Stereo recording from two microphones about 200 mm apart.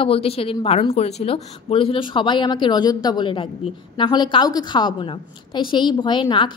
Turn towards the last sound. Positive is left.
turn(degrees=25)  # may be behind; listen again after turning